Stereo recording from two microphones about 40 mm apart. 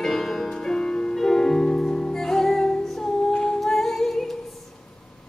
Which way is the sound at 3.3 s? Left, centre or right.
Centre.